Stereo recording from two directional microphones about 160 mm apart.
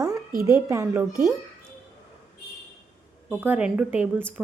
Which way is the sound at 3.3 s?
10° right (ahead or behind).